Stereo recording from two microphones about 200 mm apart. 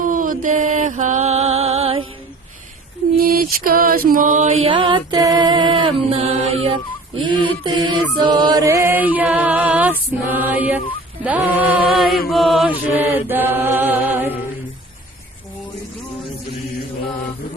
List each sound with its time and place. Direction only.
0.0 s mantra: 45° right (ahead or behind); by 2.0 s 30° right (ahead or behind)
3.2 s mantra: 45° right (ahead or behind); by 7.9 s 20° right (ahead or behind)
8.2 s chant: 20° right (ahead or behind)
11.2 s music: 5° right (ahead or behind)
12.3 s chant: centre (ahead or behind)